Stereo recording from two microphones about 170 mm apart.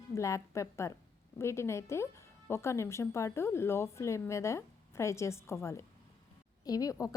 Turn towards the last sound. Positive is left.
turn(degrees=20)  # may be behind; listen again after turning